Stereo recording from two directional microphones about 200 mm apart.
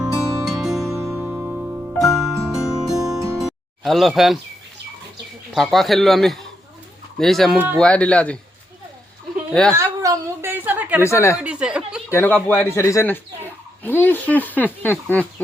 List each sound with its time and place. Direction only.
0.0 s music: centre (ahead or behind)
0.9 s music: 15° right (ahead or behind)
1.1 s music: 5° right (ahead or behind)
3.0 s music: 15° right (ahead or behind)
3.3 s music: centre (ahead or behind)
5.5 s speech: centre (ahead or behind)
7.8 s speech: 5° left (ahead or behind)
9.5 s speech: 5° left (ahead or behind)
9.7 s a sound: 15° right (ahead or behind)
11.0 s speech: 15° left (ahead or behind)
11.3 s chuckle: 5° right (ahead or behind)
12.1 s speech: 10° left (ahead or behind)